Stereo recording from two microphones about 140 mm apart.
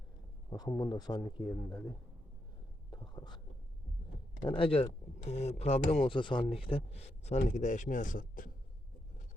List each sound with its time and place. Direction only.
0.5 s speech: 30° left (ahead or behind)
2.9 s whispering: 30° left (ahead or behind)
4.4 s speech: 40° left (ahead or behind); by 8.4 s 75° left (ahead or behind)